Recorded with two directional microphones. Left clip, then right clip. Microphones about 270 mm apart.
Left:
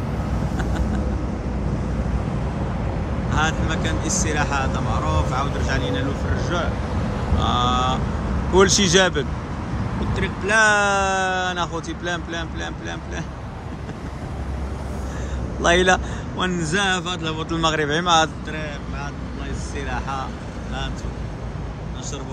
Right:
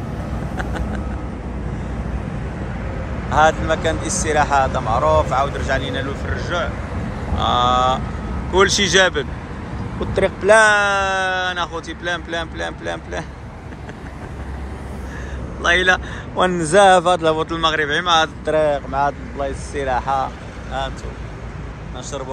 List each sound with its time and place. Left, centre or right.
3.3 s speech: centre
9.9 s speech: centre
15.6 s a man's voice: left
16.3 s speech: centre
17.5 s speech: centre
18.4 s speech: centre